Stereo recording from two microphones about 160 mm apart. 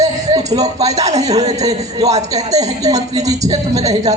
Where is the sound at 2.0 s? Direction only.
45° right (ahead or behind).